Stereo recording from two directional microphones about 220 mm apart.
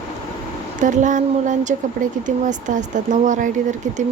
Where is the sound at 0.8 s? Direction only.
35° right (ahead or behind).